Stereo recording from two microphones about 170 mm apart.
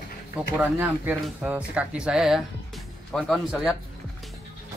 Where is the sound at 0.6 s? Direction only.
5° right (ahead or behind).